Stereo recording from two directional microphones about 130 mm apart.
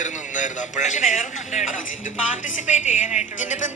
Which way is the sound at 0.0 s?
70° left (ahead or behind).